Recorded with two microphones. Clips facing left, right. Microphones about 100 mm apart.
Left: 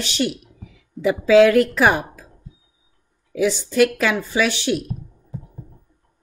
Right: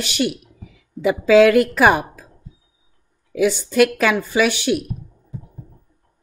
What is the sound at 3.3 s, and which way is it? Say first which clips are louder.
Speech: right 2 dB; 55° right (ahead or behind).